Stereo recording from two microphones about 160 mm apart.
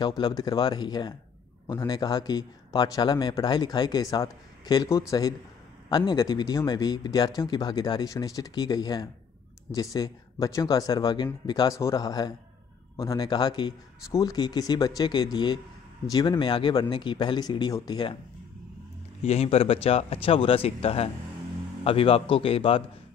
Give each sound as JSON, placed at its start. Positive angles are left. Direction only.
{"t": 0.0, "sound": "a man's voice", "side_deg": 25}
{"t": 19.2, "sound": "speech", "side_deg": 40}